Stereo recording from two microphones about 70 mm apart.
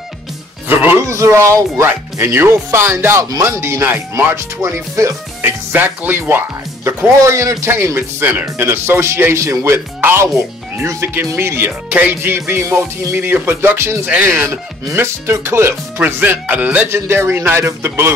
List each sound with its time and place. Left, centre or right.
1.0 s speech: right
1.9 s speech: right
5.7 s speech: right
14.0 s speech: right
14.5 s speech: right
16.2 s speech: right
16.9 s speech: right